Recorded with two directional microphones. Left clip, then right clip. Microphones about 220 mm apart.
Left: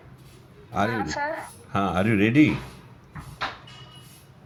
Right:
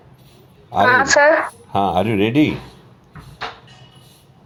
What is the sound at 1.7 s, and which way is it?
Speech, 20° left (ahead or behind).